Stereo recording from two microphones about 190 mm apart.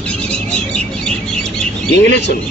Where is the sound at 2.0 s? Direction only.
65° left (ahead or behind).